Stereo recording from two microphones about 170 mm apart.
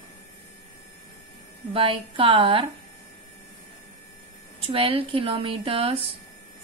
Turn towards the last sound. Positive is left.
turn(degrees=-35)  # may be behind; listen again after turning